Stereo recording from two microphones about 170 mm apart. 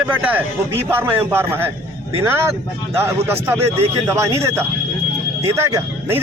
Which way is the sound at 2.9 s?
15° right (ahead or behind).